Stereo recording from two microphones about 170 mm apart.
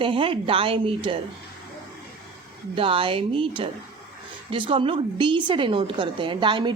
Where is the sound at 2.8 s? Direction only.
30° right (ahead or behind).